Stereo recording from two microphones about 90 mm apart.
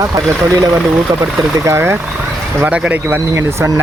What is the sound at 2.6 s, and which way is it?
Speech, 15° right (ahead or behind).